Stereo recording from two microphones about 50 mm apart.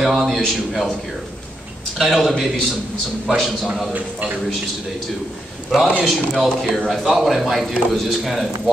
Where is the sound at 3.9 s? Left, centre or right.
Right.